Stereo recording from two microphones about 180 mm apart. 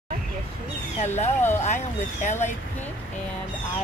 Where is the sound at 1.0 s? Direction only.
40° left (ahead or behind).